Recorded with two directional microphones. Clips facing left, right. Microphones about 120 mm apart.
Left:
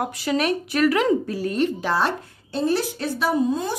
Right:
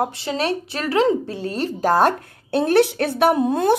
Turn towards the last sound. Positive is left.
turn(degrees=-60)  # may be behind; listen again after turning